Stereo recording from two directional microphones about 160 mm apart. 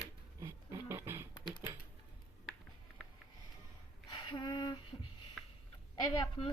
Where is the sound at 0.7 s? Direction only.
15° right (ahead or behind).